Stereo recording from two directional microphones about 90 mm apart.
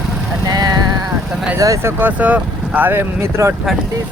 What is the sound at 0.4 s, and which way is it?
Vehicle, 50° right (ahead or behind).